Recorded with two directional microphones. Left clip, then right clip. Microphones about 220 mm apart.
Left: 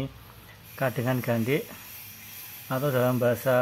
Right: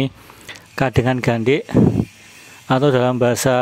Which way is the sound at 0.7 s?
45° right (ahead or behind).